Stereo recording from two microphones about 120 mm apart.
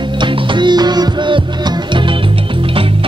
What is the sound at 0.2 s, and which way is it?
Music, 40° right (ahead or behind).